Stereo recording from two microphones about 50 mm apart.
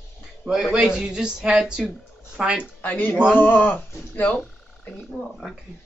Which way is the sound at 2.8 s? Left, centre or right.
Left.